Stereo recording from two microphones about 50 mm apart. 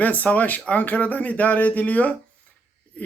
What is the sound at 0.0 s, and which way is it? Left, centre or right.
Speech, left.